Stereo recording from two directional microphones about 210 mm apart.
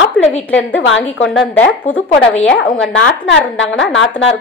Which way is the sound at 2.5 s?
65° left (ahead or behind).